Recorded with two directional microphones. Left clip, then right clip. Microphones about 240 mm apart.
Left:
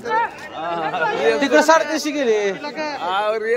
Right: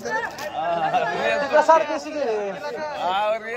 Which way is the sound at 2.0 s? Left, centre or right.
Left.